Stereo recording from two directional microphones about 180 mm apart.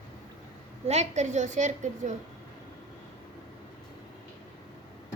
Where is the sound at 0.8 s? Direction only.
35° right (ahead or behind).